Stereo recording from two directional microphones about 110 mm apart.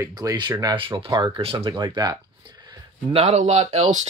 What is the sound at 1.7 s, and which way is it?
Speech, 40° right (ahead or behind).